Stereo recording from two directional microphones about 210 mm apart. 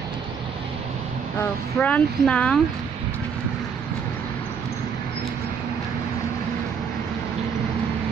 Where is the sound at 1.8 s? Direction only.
5° left (ahead or behind).